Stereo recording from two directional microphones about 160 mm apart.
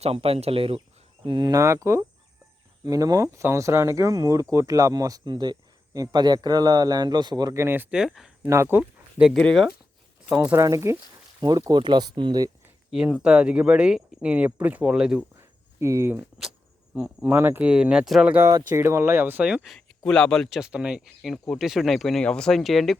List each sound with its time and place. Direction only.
0.0 s speech: 35° right (ahead or behind); by 8.3 s 5° right (ahead or behind)
8.4 s speech: 15° right (ahead or behind)
9.1 s speech: 5° right (ahead or behind)
10.4 s speech: 20° right (ahead or behind)
12.9 s speech: 5° right (ahead or behind)
15.4 s a sound: 20° right (ahead or behind)
16.9 s speech: 10° right (ahead or behind)